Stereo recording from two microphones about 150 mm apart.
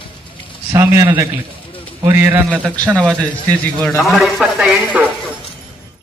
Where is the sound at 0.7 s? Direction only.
15° right (ahead or behind).